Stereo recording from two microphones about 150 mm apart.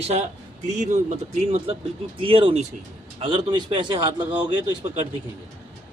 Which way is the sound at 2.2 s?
35° right (ahead or behind).